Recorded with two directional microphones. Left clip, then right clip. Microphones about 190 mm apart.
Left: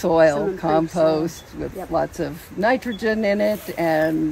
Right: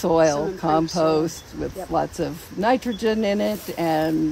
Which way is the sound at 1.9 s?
25° right (ahead or behind).